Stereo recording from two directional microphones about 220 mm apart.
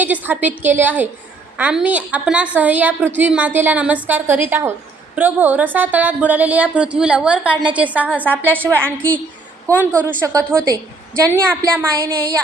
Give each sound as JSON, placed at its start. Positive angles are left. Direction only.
{"t": 0.0, "sound": "a woman's voice", "side_deg": -5}
{"t": 8.8, "sound": "a woman's voice", "side_deg": 5}
{"t": 9.7, "sound": "speech", "side_deg": -15}